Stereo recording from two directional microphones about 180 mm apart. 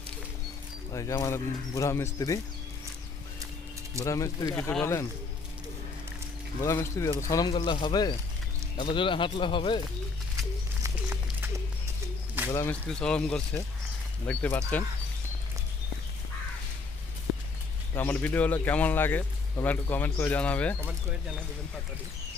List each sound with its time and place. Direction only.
0.9 s speech: 15° left (ahead or behind)
4.0 s speech: 20° left (ahead or behind)
6.6 s speech: 15° left (ahead or behind)
10.8 s a sound: 15° right (ahead or behind)
12.5 s speech: 15° left (ahead or behind)
17.9 s speech: 10° left (ahead or behind)